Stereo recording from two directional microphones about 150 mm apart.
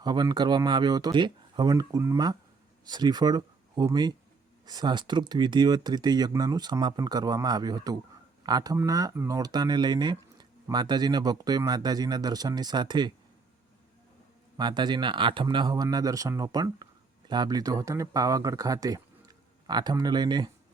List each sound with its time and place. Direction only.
0.0 s speech: 30° right (ahead or behind)
14.6 s speech: 30° right (ahead or behind)